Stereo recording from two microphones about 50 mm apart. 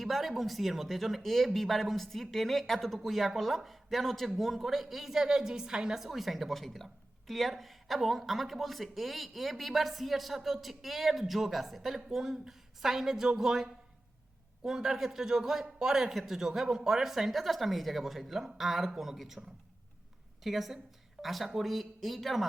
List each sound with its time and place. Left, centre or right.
0.0 s a woman's voice: centre
20.4 s a woman's voice: centre